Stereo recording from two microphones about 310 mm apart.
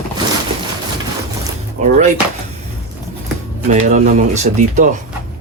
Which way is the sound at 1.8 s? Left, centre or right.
Right.